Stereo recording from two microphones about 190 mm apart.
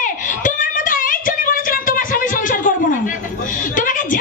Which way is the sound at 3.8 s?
45° left (ahead or behind).